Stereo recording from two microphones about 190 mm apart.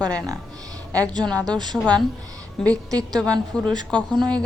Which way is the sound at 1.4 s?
20° right (ahead or behind).